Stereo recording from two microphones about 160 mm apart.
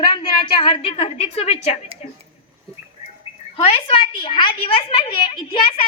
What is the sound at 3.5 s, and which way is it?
A woman's voice, 40° left (ahead or behind).